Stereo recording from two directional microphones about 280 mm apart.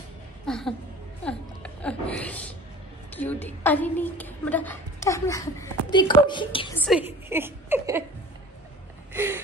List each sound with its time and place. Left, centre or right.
0.5 s a sound: centre
1.2 s a woman's voice: centre
6.8 s a woman's voice: centre
9.1 s gasp: centre